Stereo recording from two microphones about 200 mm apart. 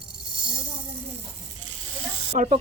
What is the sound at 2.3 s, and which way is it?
Snake, 35° right (ahead or behind).